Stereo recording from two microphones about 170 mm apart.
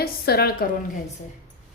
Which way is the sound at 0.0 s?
65° left (ahead or behind).